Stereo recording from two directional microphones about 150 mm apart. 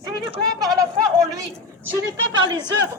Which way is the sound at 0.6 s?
25° right (ahead or behind).